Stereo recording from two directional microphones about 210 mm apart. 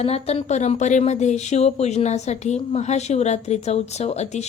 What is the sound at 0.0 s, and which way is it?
Speech, 30° left (ahead or behind).